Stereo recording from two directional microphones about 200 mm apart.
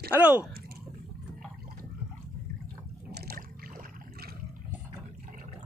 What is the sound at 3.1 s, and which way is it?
Boat, 50° right (ahead or behind).